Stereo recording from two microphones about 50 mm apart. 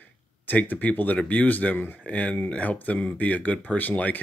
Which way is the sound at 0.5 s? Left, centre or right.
Left.